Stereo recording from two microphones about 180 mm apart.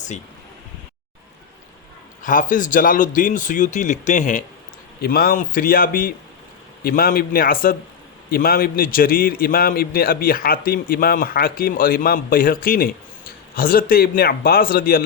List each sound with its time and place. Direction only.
2.2 s a man's voice: 45° left (ahead or behind)
5.0 s a man's voice: 55° left (ahead or behind)